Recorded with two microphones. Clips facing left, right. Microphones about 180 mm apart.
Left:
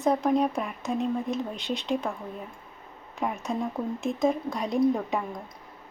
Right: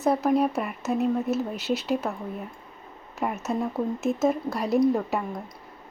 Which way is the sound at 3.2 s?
5° right (ahead or behind).